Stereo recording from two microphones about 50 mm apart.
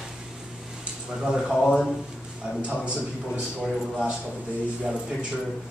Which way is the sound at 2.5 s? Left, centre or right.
Right.